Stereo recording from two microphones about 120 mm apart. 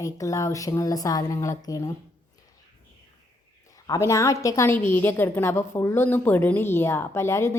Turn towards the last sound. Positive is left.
turn(degrees=20)  # may be behind; listen again after turning